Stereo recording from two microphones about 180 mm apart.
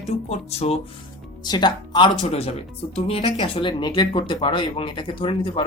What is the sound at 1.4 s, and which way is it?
Speech, 25° left (ahead or behind).